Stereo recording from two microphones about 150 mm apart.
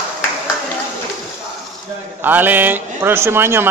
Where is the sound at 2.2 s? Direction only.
10° right (ahead or behind).